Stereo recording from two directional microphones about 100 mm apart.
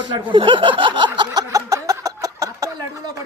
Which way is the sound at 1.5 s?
35° right (ahead or behind).